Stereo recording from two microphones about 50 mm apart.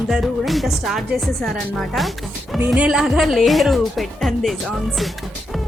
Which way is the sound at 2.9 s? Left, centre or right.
Centre.